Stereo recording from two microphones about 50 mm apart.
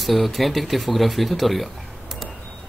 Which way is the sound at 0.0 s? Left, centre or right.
Centre.